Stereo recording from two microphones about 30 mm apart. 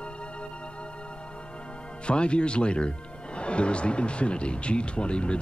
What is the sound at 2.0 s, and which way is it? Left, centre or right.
Speech, left.